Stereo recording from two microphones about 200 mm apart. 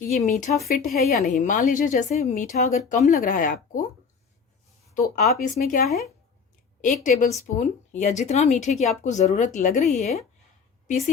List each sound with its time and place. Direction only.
0.0 s speech: 35° left (ahead or behind)
4.9 s speech: 40° left (ahead or behind)